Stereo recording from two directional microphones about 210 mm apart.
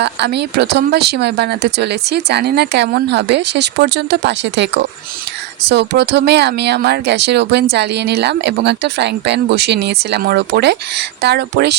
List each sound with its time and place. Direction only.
0.0 s speech: 55° right (ahead or behind)